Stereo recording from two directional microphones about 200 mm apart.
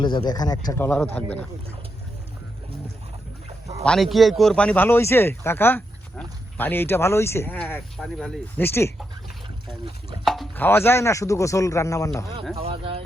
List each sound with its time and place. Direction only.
0.0 s speech: 20° left (ahead or behind)
3.8 s speech: centre (ahead or behind)
10.2 s speech: centre (ahead or behind); by 12.2 s 15° left (ahead or behind)
12.5 s speech: 30° right (ahead or behind)